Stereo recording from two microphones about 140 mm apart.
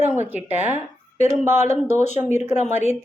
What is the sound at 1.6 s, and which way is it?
Speech, 55° left (ahead or behind).